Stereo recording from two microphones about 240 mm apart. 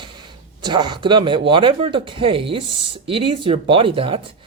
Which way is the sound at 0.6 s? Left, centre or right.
Centre.